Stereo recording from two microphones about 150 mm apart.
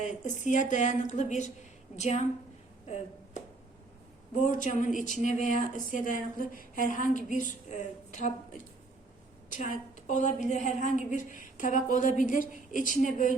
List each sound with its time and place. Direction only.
0.0 s a woman's voice: 55° left (ahead or behind)
2.8 s a sound: 45° left (ahead or behind)
4.4 s a woman's voice: 60° left (ahead or behind)